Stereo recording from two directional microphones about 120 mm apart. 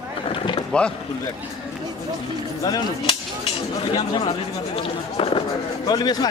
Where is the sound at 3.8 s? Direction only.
40° left (ahead or behind).